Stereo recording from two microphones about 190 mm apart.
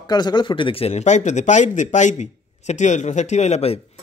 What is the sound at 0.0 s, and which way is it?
Speech, 20° left (ahead or behind).